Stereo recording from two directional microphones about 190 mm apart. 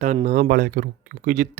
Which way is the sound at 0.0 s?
40° right (ahead or behind).